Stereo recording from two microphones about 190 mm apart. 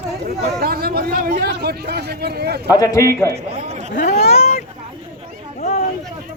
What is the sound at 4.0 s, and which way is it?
Speech, 55° left (ahead or behind).